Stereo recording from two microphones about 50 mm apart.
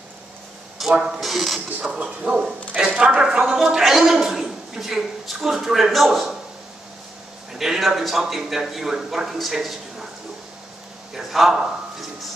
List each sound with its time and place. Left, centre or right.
0.7 s a man's voice: centre
2.0 s a woman's voice: right; by 6.3 s centre
7.5 s a man's voice: centre
11.1 s a sound: centre